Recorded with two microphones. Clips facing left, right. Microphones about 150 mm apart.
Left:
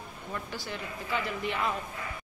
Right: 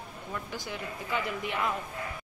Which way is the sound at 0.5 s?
15° right (ahead or behind).